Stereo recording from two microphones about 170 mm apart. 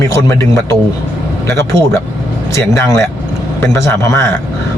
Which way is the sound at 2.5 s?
15° left (ahead or behind).